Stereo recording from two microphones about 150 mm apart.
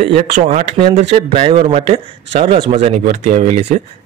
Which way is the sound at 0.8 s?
40° right (ahead or behind).